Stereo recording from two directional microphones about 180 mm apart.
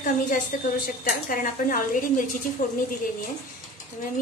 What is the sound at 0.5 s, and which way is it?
Speech, 50° left (ahead or behind).